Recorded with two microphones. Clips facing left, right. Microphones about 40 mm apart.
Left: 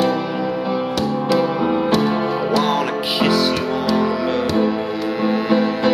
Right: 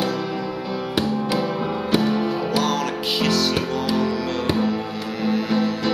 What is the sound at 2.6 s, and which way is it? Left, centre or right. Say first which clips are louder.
Music: left 4 dB; centre.